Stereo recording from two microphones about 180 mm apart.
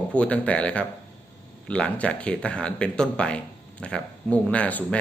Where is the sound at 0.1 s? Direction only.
5° left (ahead or behind).